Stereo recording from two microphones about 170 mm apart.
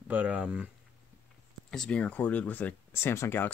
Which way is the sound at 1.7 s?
5° left (ahead or behind).